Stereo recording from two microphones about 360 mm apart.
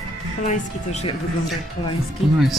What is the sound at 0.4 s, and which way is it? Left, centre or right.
Speech, centre.